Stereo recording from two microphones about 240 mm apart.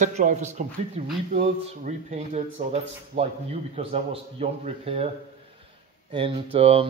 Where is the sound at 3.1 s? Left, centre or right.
Right.